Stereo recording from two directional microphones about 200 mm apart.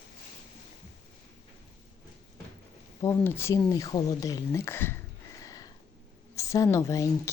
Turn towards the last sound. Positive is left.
turn(degrees=15)  # may be behind; listen again after turning